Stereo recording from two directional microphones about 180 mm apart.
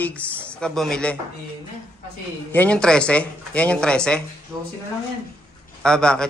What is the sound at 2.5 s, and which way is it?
Speech, 5° left (ahead or behind).